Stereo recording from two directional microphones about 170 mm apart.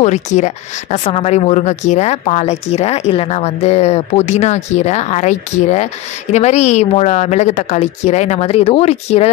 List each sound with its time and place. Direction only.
0.0 s a woman's voice: 45° left (ahead or behind)